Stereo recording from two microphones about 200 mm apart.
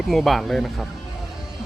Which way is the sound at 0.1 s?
Centre (ahead or behind).